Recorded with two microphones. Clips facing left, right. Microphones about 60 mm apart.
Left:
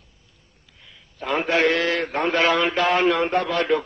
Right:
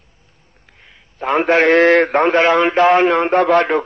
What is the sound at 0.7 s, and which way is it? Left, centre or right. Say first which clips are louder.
A man's voice: right 7 dB; right.